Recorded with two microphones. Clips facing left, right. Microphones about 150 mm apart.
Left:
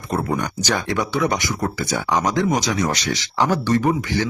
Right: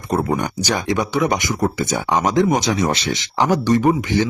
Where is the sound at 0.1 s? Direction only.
20° right (ahead or behind).